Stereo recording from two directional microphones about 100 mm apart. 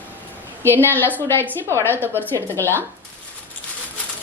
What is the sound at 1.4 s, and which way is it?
Speech, 25° right (ahead or behind).